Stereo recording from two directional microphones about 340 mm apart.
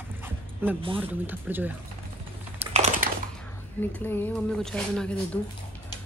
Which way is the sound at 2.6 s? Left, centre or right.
Centre.